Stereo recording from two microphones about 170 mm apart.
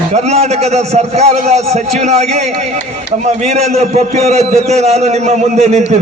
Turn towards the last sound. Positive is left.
turn(degrees=-40)  # may be behind; listen again after turning